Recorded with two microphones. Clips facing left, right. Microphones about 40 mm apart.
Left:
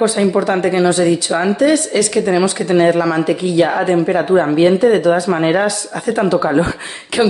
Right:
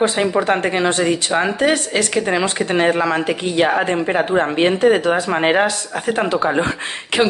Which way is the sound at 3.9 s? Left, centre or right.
Right.